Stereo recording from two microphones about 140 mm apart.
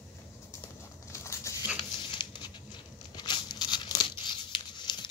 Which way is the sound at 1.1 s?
20° left (ahead or behind).